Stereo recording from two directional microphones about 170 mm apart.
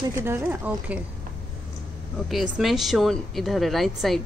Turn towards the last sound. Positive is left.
turn(degrees=0)  # may be behind; listen again after turning